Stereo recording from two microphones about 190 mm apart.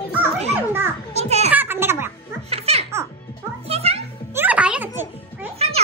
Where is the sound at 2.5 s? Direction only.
35° right (ahead or behind).